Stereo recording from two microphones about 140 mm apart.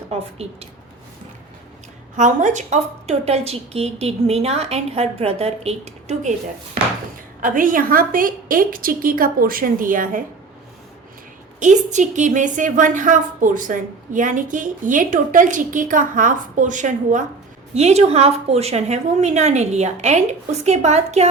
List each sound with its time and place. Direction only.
0.1 s speech: 45° right (ahead or behind)
2.1 s a woman's voice: 60° right (ahead or behind)
7.4 s a woman's voice: 75° right (ahead or behind)
11.6 s a woman's voice: 60° right (ahead or behind)
17.7 s a woman's voice: 50° right (ahead or behind)